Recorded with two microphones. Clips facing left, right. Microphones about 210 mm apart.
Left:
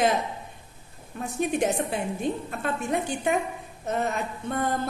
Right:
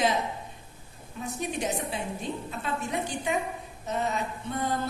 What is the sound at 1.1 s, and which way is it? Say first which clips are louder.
A woman's voice: left 6 dB; 55° left (ahead or behind).